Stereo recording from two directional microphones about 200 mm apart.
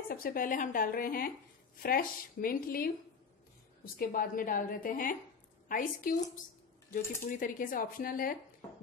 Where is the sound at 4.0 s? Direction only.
45° left (ahead or behind).